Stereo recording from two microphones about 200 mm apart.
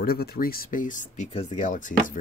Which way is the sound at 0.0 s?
50° left (ahead or behind).